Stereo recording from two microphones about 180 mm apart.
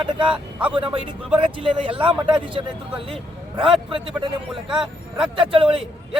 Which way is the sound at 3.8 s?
30° right (ahead or behind).